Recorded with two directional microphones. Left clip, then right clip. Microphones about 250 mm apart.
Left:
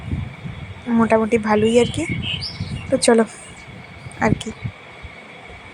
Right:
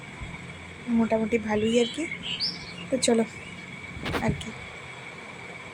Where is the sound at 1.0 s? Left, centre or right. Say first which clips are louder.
Left 10 dB; centre.